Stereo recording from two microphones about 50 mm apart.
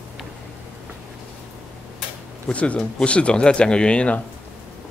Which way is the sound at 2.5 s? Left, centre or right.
Left.